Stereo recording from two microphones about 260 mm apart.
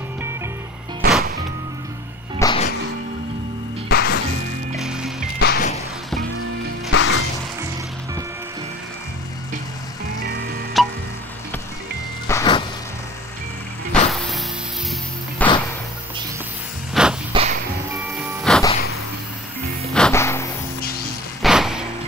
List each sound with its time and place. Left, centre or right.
1.0 s music: right
2.3 s music: centre
3.9 s music: left
4.7 s music: centre
5.4 s music: left
6.9 s music: left
10.8 s music: centre
12.3 s vehicle: centre
15.4 s music: centre
16.9 s a sound: centre
17.3 s music: right
18.2 s music: centre
19.9 s music: centre
21.4 s music: centre